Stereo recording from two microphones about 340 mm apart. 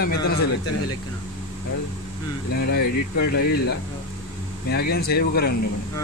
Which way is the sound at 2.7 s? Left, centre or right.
Left.